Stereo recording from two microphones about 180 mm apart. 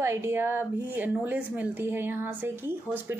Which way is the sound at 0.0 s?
15° right (ahead or behind).